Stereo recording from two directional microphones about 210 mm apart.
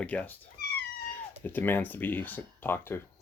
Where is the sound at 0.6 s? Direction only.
45° left (ahead or behind).